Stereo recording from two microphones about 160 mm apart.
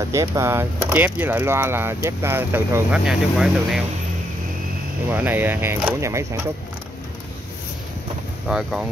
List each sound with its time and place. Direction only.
0.1 s speech: 20° right (ahead or behind); by 3.8 s 5° right (ahead or behind)
5.1 s speech: 10° right (ahead or behind)
8.5 s speech: 5° right (ahead or behind)